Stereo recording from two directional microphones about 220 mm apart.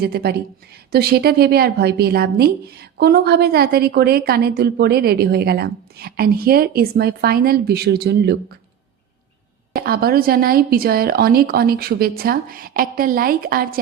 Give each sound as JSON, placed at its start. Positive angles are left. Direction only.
{"t": 0.0, "sound": "a woman's voice", "side_deg": -45}
{"t": 9.7, "sound": "a woman's voice", "side_deg": -45}